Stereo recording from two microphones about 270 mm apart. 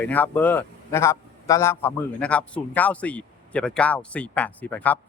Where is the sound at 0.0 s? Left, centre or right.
Centre.